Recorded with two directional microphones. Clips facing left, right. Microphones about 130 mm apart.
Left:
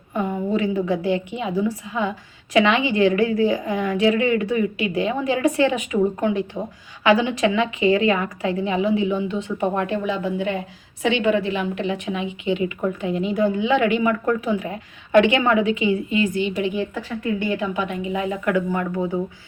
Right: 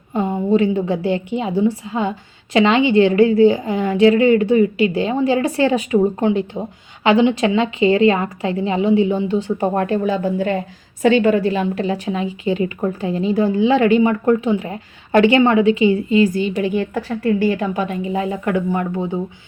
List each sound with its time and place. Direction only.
0.1 s a woman's voice: 25° right (ahead or behind)